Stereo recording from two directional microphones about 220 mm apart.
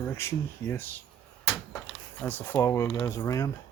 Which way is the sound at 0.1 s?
10° left (ahead or behind).